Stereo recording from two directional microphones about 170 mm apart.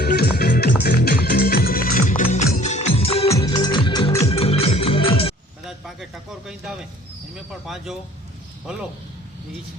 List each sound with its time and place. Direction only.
0.0 s music: 65° left (ahead or behind); by 3.4 s 35° left (ahead or behind)
3.4 s music: 25° left (ahead or behind)
5.6 s a sound: centre (ahead or behind)
7.3 s speech: centre (ahead or behind)